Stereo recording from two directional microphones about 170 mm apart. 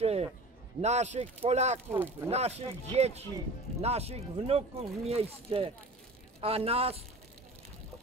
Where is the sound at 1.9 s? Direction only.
10° right (ahead or behind).